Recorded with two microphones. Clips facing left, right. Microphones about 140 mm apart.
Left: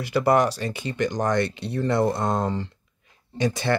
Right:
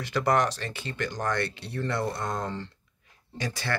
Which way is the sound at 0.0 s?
10° left (ahead or behind).